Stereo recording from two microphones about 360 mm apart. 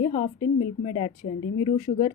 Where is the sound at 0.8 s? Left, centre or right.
Centre.